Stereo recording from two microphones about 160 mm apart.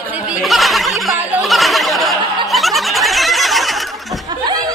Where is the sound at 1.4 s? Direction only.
Centre (ahead or behind).